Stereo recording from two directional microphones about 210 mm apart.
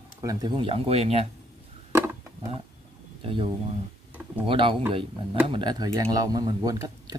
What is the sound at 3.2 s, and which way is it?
Speech, 25° right (ahead or behind).